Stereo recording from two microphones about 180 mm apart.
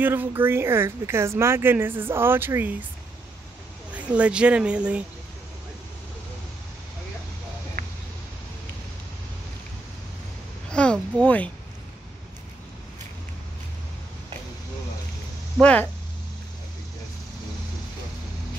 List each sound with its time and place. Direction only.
0.0 s speech: 10° right (ahead or behind)
3.9 s speech: 10° right (ahead or behind)
10.7 s a sound: 5° left (ahead or behind)
15.5 s speech: 5° left (ahead or behind)